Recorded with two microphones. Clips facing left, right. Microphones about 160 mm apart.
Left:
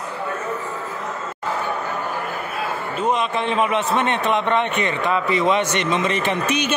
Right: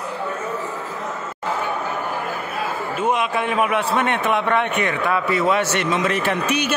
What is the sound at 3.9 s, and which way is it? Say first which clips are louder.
A man's voice: even; 10° right (ahead or behind).